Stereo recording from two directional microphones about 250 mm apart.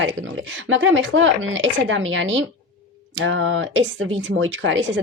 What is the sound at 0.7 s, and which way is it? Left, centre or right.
Speech, right.